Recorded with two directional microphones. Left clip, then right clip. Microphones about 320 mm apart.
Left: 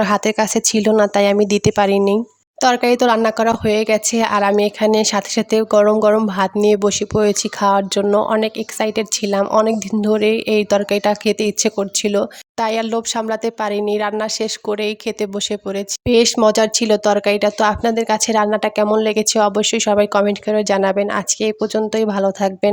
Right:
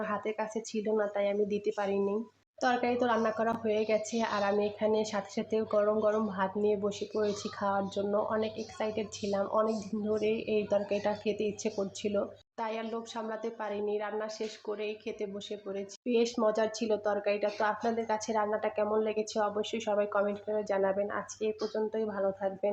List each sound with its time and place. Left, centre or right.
0.0 s speech: left